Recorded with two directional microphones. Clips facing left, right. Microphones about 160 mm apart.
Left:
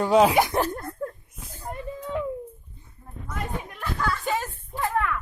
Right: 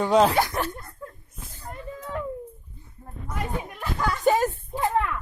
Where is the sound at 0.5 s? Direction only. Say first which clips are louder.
Left 4 dB; 40° left (ahead or behind).